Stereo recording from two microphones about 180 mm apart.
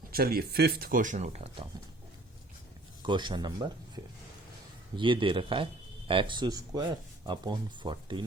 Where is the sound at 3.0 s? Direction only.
25° right (ahead or behind).